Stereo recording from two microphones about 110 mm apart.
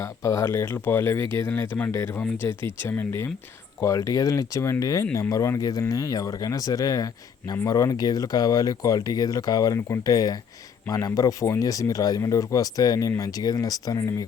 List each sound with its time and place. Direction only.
0.0 s speech: 25° left (ahead or behind)